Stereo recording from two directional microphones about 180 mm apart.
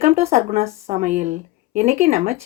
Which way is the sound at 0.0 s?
35° right (ahead or behind).